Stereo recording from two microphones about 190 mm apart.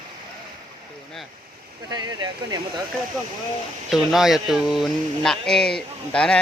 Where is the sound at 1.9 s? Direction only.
20° right (ahead or behind).